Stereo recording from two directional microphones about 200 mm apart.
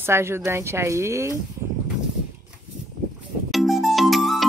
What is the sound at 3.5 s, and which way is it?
Music, centre (ahead or behind).